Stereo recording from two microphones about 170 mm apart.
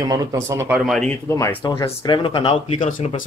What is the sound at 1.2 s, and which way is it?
Speech, 15° left (ahead or behind).